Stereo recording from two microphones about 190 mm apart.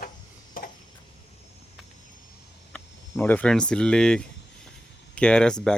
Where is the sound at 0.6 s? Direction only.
50° left (ahead or behind).